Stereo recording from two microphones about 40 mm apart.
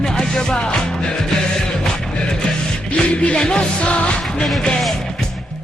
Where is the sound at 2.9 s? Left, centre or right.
Left.